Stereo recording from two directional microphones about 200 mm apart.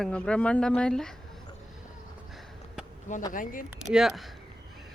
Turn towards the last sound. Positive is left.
turn(degrees=0)  # may be behind; listen again after turning